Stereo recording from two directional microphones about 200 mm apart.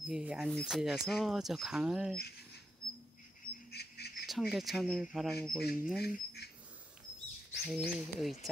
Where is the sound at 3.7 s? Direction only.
55° left (ahead or behind).